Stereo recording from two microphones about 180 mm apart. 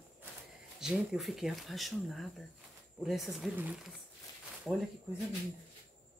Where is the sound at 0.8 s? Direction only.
Centre (ahead or behind).